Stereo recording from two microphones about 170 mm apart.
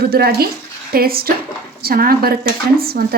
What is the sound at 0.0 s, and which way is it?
Speech, 65° right (ahead or behind).